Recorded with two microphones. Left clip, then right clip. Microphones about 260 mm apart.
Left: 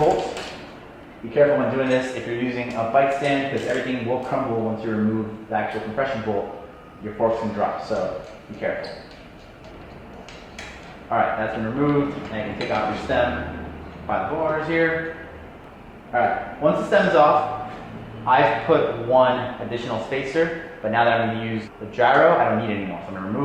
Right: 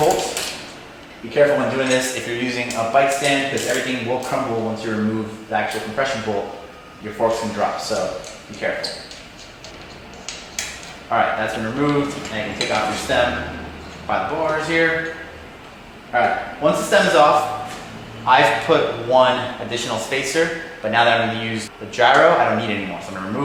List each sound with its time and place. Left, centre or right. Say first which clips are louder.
0.0 s a sound: right 2 dB; centre
1.3 s a man's voice: right 2 dB; centre
4.5 s a man's voice: right 2 dB; left; by 6.4 s centre
7.6 s a man's voice: right 3 dB; centre
11.1 s a man's voice: right 3 dB; centre
16.1 s a man's voice: right 3 dB; centre